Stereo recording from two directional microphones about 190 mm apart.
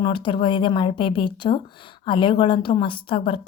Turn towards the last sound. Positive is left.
turn(degrees=30)  # may be behind; listen again after turning